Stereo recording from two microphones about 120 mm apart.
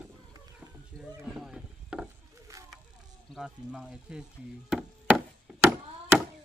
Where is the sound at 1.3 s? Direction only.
5° right (ahead or behind).